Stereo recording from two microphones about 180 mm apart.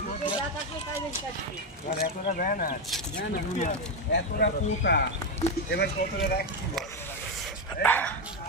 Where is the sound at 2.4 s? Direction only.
50° left (ahead or behind).